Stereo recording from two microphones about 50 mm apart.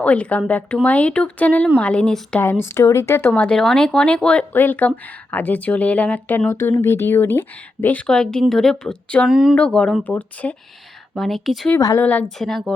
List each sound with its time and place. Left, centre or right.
0.0 s speech: left
1.8 s speech: left
2.4 s speech: left
2.8 s speech: left
3.3 s speech: left
4.5 s speech: left
6.5 s speech: left
8.0 s speech: centre
9.2 s speech: centre
9.6 s speech: centre
10.0 s speech: left
11.1 s speech: centre
11.7 s speech: left
12.4 s a woman's voice: centre